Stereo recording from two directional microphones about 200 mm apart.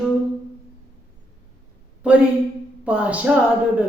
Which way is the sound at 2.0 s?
5° right (ahead or behind).